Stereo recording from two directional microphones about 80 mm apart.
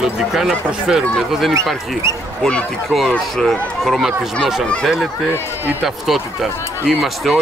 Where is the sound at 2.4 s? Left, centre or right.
Centre.